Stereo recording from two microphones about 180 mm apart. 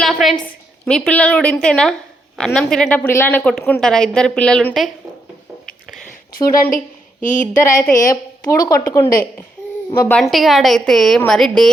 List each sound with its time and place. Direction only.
0.0 s a sound: centre (ahead or behind)
0.9 s a woman's voice: 5° left (ahead or behind)
6.3 s speech: 55° left (ahead or behind)
8.1 s a woman's voice: 20° left (ahead or behind)
10.0 s a woman's voice: 5° left (ahead or behind)